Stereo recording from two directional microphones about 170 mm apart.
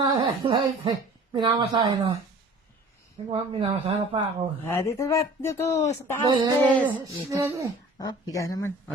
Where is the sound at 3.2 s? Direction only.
35° right (ahead or behind).